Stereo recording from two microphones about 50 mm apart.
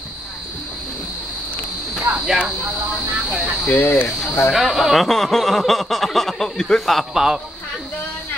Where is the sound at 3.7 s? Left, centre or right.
Left.